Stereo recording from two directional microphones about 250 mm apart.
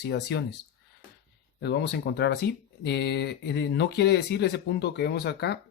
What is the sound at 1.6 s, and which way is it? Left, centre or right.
Speech, left.